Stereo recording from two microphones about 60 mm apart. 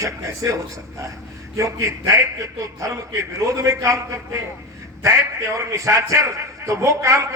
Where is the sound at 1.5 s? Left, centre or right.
Right.